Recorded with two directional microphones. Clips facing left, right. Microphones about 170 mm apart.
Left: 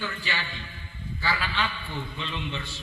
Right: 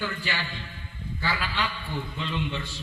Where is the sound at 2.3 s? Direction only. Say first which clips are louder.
Right 3 dB; centre (ahead or behind).